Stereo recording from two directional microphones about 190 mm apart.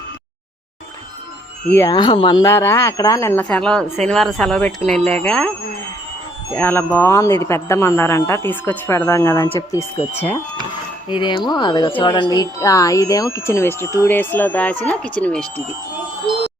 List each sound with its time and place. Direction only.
1.7 s speech: 20° left (ahead or behind)
6.5 s speech: 10° left (ahead or behind)
11.1 s speech: 25° left (ahead or behind); by 15.6 s 5° left (ahead or behind)